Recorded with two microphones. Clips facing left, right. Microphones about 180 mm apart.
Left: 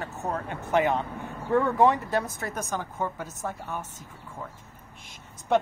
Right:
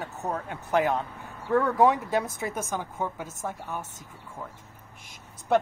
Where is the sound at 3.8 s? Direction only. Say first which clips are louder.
Left 1 dB; 45° right (ahead or behind).